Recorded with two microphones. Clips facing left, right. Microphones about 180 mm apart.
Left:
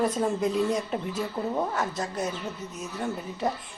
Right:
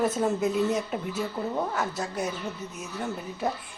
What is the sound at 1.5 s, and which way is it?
Speech, 5° left (ahead or behind).